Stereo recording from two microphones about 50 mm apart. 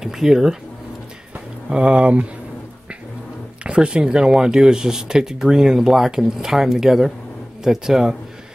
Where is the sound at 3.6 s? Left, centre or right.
Centre.